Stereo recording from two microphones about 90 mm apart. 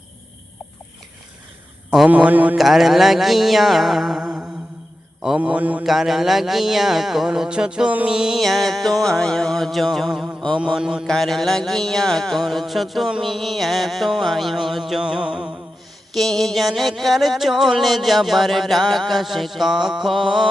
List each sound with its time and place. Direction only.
2.0 s a man's voice: 15° right (ahead or behind)
2.6 s music: centre (ahead or behind)
5.4 s mantra: 15° right (ahead or behind)
5.8 s music: centre (ahead or behind)
10.6 s mantra: 5° right (ahead or behind)
11.0 s music: 5° left (ahead or behind)
16.1 s music: 5° left (ahead or behind)